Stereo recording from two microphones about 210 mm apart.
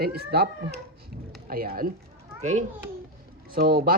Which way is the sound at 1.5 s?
45° right (ahead or behind).